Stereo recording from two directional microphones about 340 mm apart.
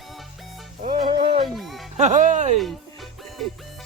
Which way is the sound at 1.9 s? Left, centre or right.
Right.